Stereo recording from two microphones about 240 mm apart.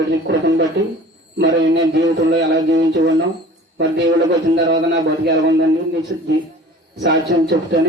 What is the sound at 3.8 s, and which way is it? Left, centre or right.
Speech, right.